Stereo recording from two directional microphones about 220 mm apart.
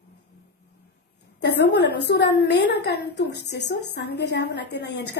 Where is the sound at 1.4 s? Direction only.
50° left (ahead or behind).